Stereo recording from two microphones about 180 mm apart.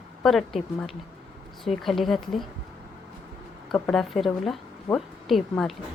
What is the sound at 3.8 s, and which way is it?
A woman's voice, 5° left (ahead or behind).